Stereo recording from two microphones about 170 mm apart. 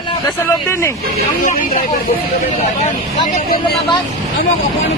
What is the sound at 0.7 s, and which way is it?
Speech, 15° left (ahead or behind).